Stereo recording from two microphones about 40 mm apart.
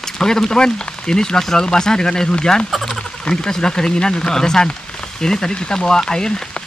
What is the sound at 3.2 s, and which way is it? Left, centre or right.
Speech, centre.